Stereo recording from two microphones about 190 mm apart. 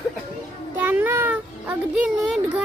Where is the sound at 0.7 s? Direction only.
10° right (ahead or behind).